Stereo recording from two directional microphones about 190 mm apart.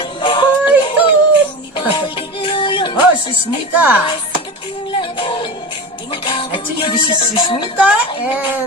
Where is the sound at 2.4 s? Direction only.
25° left (ahead or behind).